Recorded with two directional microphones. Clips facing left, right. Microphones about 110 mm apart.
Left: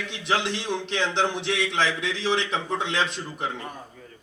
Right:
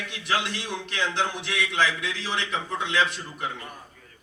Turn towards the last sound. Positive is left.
turn(degrees=25)  # may be behind; listen again after turning